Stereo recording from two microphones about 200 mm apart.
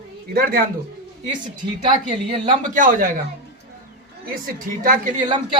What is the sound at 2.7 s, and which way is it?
Speech, 45° right (ahead or behind).